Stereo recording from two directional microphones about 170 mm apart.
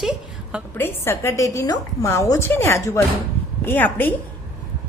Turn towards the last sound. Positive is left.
turn(degrees=10)  # may be behind; listen again after turning